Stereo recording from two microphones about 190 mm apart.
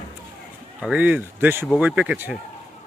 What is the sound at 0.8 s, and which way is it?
Speech, 5° right (ahead or behind).